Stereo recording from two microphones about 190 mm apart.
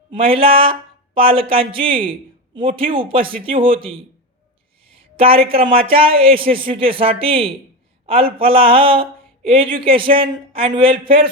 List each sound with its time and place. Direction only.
0.1 s speech: 30° right (ahead or behind)